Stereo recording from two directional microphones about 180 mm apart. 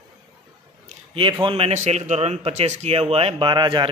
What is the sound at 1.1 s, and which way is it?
A man's voice, 30° right (ahead or behind).